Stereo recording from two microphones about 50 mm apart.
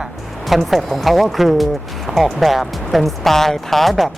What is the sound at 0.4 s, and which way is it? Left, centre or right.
Speech, centre.